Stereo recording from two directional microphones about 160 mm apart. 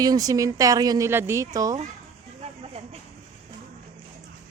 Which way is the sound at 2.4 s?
40° right (ahead or behind).